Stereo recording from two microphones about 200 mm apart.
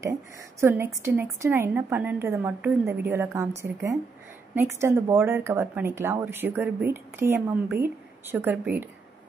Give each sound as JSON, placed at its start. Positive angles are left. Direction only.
{"t": 0.6, "sound": "speech", "side_deg": -15}